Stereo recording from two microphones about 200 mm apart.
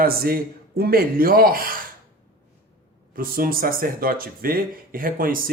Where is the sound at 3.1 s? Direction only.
45° right (ahead or behind).